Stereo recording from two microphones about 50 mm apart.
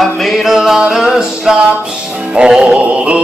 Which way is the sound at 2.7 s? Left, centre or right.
Right.